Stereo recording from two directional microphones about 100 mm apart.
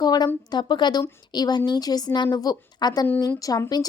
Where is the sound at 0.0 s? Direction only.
40° left (ahead or behind).